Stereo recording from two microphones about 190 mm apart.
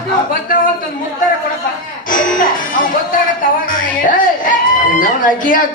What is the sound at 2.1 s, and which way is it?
Music, 45° left (ahead or behind).